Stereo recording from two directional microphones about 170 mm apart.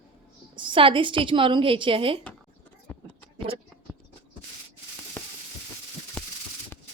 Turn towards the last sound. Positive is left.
turn(degrees=10)  # may be behind; listen again after turning